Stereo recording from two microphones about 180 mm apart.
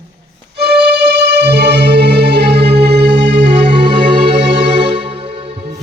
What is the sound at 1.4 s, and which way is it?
Music, 70° right (ahead or behind).